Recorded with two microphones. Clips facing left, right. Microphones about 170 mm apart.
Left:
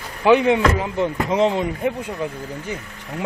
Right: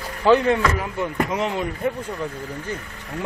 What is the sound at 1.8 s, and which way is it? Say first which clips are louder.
Speech: left 2 dB; 15° left (ahead or behind).